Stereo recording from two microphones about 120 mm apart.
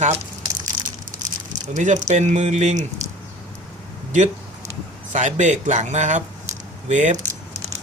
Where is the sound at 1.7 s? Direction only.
90° right; by 2.8 s 75° right (ahead or behind).